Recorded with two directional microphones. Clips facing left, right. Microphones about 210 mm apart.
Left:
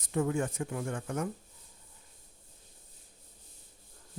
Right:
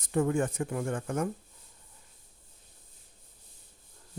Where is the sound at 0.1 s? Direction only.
50° right (ahead or behind).